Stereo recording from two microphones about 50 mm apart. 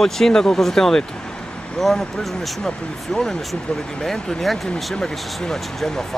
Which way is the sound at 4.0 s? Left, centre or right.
Centre.